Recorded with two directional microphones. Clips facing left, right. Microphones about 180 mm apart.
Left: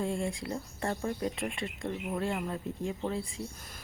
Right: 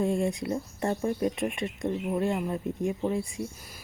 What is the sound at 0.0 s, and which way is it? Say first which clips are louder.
Speech: right 6 dB; 20° right (ahead or behind).